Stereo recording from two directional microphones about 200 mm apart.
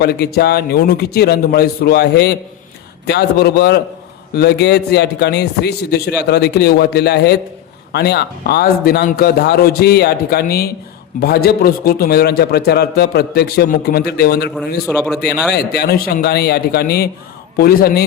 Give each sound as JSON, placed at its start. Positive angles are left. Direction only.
{"t": 0.0, "sound": "a man's voice", "side_deg": 50}
{"t": 14.9, "sound": "a man's voice", "side_deg": 10}
{"t": 15.5, "sound": "a man's voice", "side_deg": 55}